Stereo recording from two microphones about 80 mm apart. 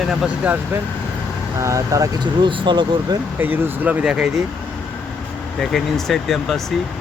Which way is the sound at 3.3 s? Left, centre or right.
Right.